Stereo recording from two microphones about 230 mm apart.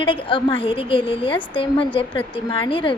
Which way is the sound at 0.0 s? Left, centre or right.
Left.